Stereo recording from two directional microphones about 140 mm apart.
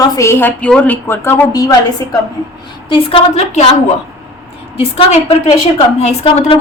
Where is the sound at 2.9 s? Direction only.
40° left (ahead or behind).